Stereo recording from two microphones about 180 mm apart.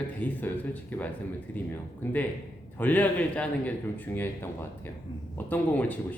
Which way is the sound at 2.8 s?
10° left (ahead or behind).